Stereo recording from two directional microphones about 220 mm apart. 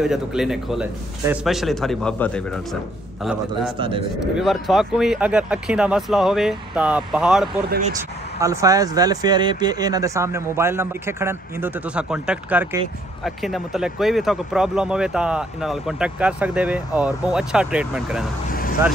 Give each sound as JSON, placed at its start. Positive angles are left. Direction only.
{"t": 0.0, "sound": "speech", "side_deg": 0}
{"t": 4.2, "sound": "speech", "side_deg": 0}
{"t": 8.4, "sound": "speech", "side_deg": -15}
{"t": 18.5, "sound": "vehicle", "side_deg": 40}